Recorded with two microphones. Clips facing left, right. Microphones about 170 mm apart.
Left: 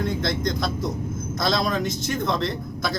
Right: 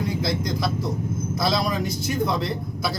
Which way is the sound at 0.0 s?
5° right (ahead or behind).